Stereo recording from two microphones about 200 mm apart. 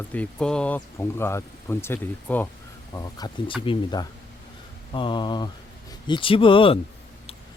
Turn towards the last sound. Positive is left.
turn(degrees=25)  # may be behind; listen again after turning